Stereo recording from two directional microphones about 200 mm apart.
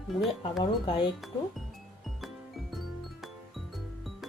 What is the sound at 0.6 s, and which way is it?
Speech, 25° left (ahead or behind).